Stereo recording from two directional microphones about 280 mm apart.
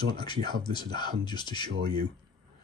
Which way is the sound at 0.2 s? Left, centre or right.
Centre.